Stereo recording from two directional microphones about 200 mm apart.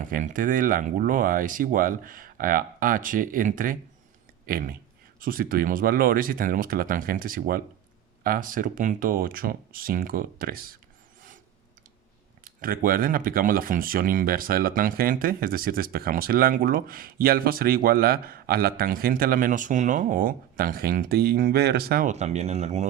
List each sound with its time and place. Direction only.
0.0 s speech: 40° right (ahead or behind)
12.5 s speech: 45° right (ahead or behind)